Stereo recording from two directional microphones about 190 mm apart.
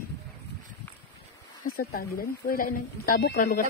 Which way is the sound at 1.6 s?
50° left (ahead or behind).